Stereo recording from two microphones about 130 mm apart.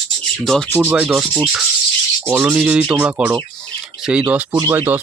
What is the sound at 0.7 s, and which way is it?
Rub, 10° right (ahead or behind).